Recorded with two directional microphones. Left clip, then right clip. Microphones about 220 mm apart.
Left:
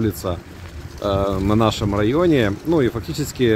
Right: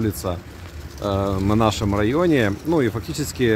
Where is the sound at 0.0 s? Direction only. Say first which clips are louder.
Left 2 dB; 10° right (ahead or behind).